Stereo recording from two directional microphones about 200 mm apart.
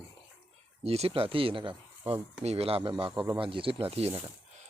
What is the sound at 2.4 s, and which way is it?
Speech, 30° right (ahead or behind).